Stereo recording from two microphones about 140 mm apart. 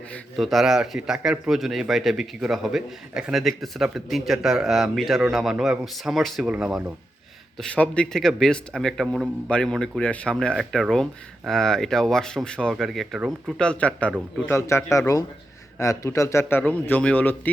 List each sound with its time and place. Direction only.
0.1 s speech: centre (ahead or behind)
7.6 s speech: 5° left (ahead or behind)
13.6 s a man's voice: 10° left (ahead or behind)